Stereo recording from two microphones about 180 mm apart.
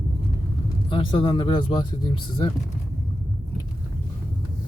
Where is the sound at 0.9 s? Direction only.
25° left (ahead or behind).